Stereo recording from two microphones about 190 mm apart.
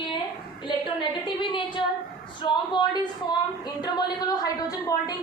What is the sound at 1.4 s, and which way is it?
A woman's voice, 25° left (ahead or behind).